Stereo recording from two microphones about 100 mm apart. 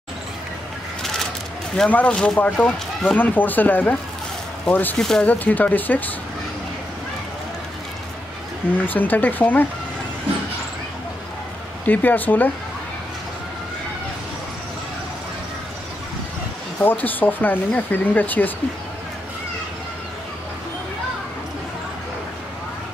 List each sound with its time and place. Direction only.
1.8 s speech: 15° left (ahead or behind)
3.2 s speech: 20° left (ahead or behind)
4.9 s speech: 5° left (ahead or behind)
5.2 s speech: 15° left (ahead or behind)
8.8 s speech: 20° left (ahead or behind)
11.8 s speech: 15° left (ahead or behind)
16.8 s speech: 20° left (ahead or behind)